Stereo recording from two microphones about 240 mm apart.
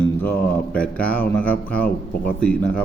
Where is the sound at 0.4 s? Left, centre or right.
Centre.